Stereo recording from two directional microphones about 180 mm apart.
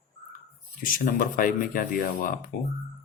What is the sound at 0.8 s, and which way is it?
Speech, 50° left (ahead or behind).